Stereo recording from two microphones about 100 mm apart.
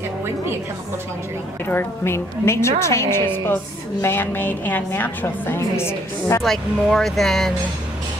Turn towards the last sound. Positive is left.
turn(degrees=0)  # may be behind; listen again after turning